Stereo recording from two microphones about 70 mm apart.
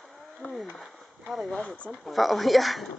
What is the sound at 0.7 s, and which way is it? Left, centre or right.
Speech, centre.